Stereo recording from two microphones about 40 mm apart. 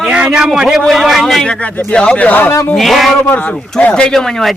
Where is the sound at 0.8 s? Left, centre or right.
Centre.